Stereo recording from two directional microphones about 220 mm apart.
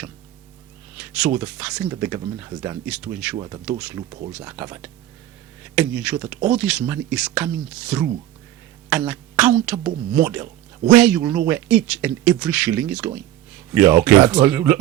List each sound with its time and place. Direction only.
0.9 s speech: 5° right (ahead or behind)
3.3 s speech: 15° right (ahead or behind)
3.7 s speech: 5° right (ahead or behind)